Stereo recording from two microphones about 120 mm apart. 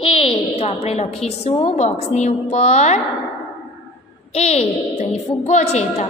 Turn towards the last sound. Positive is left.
turn(degrees=65)  # may be behind; listen again after turning